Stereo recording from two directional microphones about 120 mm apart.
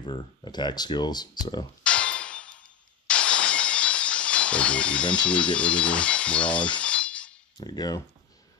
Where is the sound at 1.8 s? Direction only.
10° left (ahead or behind).